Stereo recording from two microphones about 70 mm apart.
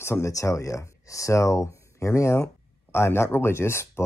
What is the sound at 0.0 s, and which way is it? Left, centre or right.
Speech, left.